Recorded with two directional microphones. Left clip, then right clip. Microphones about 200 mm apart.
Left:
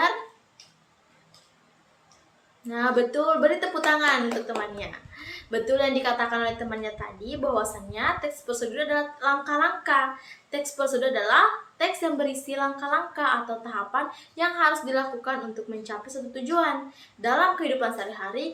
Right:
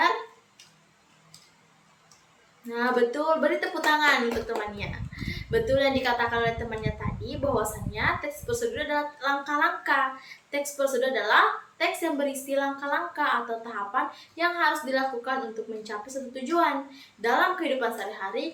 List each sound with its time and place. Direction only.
2.6 s a woman's voice: 15° left (ahead or behind)